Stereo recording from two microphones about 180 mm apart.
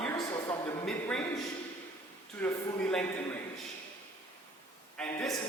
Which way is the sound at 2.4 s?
5° left (ahead or behind).